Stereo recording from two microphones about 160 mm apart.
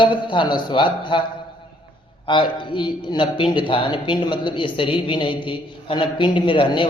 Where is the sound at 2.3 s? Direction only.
30° left (ahead or behind).